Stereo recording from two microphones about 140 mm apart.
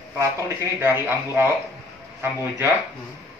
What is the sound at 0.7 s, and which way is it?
Speech, 15° right (ahead or behind).